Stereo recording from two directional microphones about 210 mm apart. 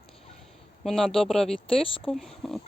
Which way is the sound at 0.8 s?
Centre (ahead or behind).